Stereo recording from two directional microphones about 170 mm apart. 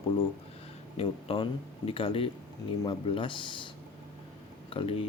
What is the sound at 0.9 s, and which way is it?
Speech, 35° left (ahead or behind).